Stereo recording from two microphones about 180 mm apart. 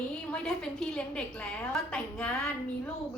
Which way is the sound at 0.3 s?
5° left (ahead or behind).